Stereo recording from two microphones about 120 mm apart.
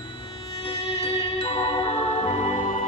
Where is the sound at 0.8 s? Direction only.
55° left (ahead or behind).